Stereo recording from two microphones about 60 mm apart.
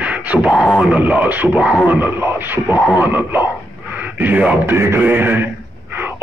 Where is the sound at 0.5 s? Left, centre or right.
Centre.